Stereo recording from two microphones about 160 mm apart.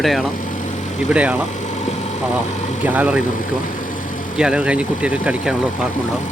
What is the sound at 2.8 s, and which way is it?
Speech, 10° right (ahead or behind).